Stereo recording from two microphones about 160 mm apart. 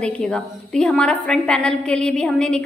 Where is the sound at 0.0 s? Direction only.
5° left (ahead or behind).